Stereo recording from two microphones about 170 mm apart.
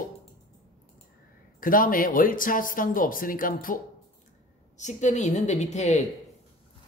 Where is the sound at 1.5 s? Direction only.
55° left (ahead or behind).